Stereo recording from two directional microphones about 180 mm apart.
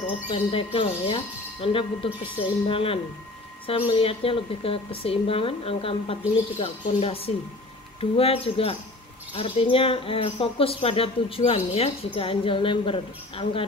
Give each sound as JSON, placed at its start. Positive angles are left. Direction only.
{"t": 0.3, "sound": "speech", "side_deg": 30}